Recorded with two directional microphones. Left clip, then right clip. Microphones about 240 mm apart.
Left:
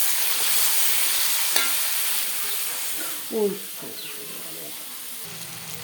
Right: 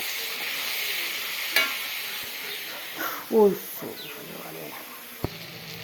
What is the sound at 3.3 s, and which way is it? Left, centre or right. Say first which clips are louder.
Speech: right 5 dB; right.